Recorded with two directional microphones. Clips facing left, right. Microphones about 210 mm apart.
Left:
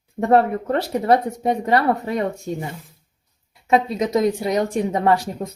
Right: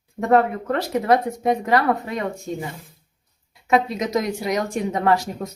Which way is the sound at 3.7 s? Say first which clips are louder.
Left 1 dB; 30° left (ahead or behind).